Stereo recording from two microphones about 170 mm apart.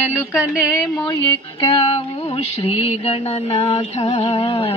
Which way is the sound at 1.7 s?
35° left (ahead or behind).